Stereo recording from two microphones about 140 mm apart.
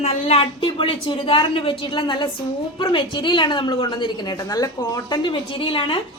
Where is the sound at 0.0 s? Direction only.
50° left (ahead or behind).